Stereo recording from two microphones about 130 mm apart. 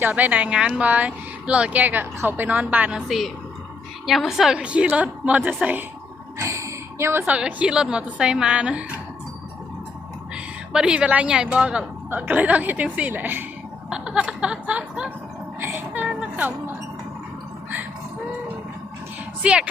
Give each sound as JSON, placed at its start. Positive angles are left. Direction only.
{"t": 0.0, "sound": "speech", "side_deg": -15}
{"t": 3.1, "sound": "a woman's voice", "side_deg": 0}
{"t": 6.4, "sound": "a sound", "side_deg": -20}
{"t": 7.3, "sound": "speech", "side_deg": -10}
{"t": 10.3, "sound": "speech", "side_deg": -5}
{"t": 15.9, "sound": "a sound", "side_deg": -5}
{"t": 19.4, "sound": "speech", "side_deg": -5}